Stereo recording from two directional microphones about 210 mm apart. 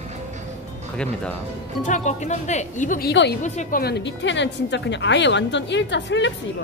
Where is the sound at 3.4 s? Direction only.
35° left (ahead or behind); by 6.3 s 60° left (ahead or behind).